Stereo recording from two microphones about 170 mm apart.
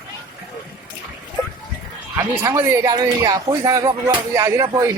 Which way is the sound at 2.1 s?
15° right (ahead or behind).